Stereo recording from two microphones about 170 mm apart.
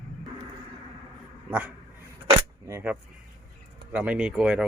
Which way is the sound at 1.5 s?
10° right (ahead or behind).